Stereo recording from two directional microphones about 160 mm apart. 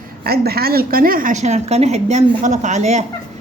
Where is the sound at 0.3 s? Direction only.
75° right (ahead or behind).